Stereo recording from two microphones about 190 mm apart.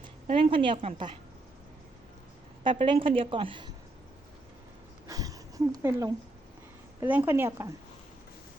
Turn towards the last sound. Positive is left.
turn(degrees=-15)  # may be behind; listen again after turning